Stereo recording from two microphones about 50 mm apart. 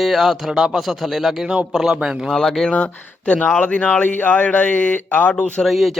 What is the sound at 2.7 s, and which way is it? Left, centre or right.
A man's voice, left.